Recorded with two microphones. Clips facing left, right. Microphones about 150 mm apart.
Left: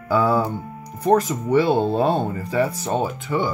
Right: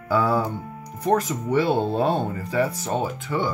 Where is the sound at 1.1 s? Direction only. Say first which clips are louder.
Left 4 dB; 35° left (ahead or behind).